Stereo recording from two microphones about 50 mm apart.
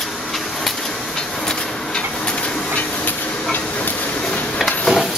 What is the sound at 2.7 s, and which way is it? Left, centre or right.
Steam, left.